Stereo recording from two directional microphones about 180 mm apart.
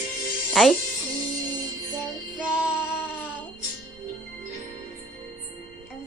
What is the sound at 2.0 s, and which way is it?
Child singing, 5° right (ahead or behind).